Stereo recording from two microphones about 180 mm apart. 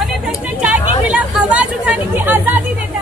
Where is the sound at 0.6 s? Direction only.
5° right (ahead or behind).